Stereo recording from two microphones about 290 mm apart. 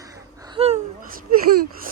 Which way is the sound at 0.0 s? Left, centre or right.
Centre.